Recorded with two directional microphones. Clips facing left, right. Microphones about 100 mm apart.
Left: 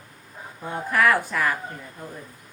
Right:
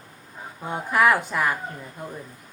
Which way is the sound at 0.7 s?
20° right (ahead or behind).